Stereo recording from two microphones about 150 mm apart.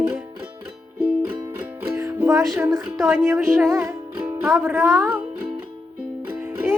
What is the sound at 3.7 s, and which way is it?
Music, 15° right (ahead or behind).